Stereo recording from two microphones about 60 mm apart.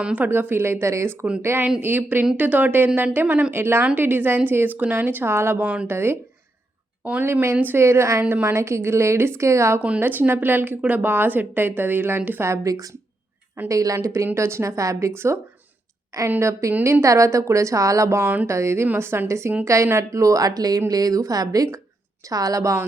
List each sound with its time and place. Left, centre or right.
0.0 s speech: right
0.3 s a woman's voice: right
1.8 s a woman's voice: right
5.6 s speech: right
5.9 s a woman's voice: right
7.5 s a woman's voice: right
7.8 s a woman's voice: right
8.3 s a woman's voice: right
10.0 s a woman's voice: right
12.6 s a woman's voice: right
16.4 s a woman's voice: right